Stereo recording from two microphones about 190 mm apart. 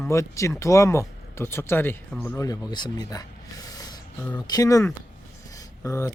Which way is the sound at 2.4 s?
20° left (ahead or behind).